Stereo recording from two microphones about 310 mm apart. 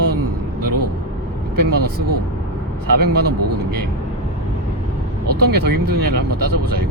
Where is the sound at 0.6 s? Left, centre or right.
Right.